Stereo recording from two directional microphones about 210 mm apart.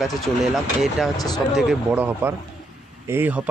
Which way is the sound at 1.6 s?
5° right (ahead or behind).